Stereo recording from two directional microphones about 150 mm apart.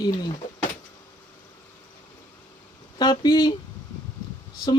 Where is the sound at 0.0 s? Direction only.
25° left (ahead or behind).